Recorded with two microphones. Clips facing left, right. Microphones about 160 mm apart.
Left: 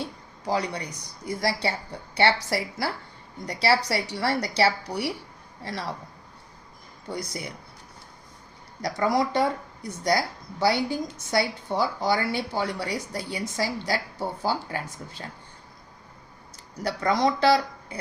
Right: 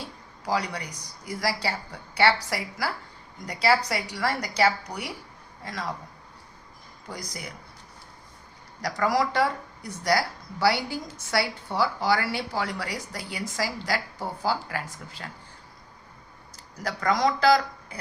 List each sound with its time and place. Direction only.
0.4 s a man's voice: 25° left (ahead or behind)
7.1 s speech: 30° left (ahead or behind)
8.8 s speech: 25° left (ahead or behind)
16.8 s speech: 25° left (ahead or behind)